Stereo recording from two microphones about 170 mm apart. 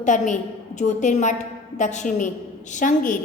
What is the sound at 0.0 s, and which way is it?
A woman's voice, 45° left (ahead or behind).